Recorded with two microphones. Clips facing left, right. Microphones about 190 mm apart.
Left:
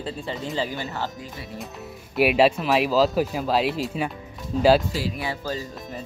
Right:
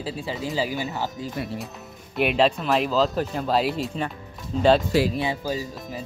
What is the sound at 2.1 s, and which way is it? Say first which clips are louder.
Speech: left 2 dB; 5° left (ahead or behind).